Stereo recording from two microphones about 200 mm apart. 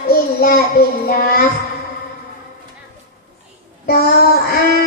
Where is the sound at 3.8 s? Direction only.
50° left (ahead or behind).